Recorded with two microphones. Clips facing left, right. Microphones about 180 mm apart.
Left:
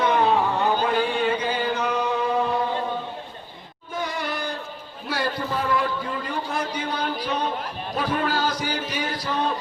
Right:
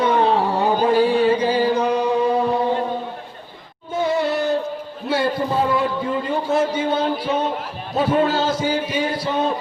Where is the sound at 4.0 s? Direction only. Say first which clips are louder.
Right 9 dB; 25° right (ahead or behind).